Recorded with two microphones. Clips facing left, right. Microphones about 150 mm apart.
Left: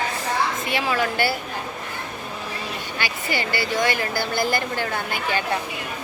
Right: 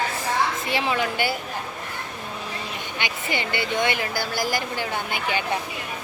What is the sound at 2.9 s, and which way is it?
A woman's voice, 20° right (ahead or behind).